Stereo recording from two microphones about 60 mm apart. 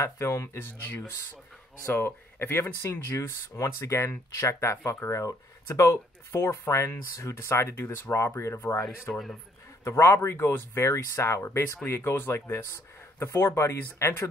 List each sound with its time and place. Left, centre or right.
0.0 s speech: left
0.6 s speech: left
2.9 s speech: left
9.1 s a man's voice: centre
9.8 s speech: left